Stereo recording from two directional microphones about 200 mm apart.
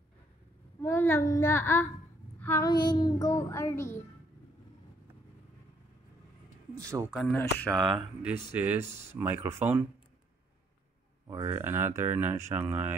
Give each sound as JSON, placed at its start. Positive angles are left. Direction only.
{"t": 0.8, "sound": "child singing", "side_deg": 10}
{"t": 6.8, "sound": "speech", "side_deg": -15}
{"t": 7.2, "sound": "speech", "side_deg": 5}
{"t": 11.2, "sound": "speech", "side_deg": -15}